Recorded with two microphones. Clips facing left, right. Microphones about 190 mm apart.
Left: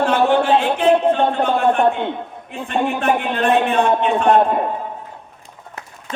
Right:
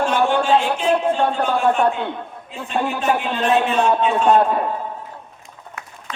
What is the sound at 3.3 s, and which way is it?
Speech, 60° left (ahead or behind).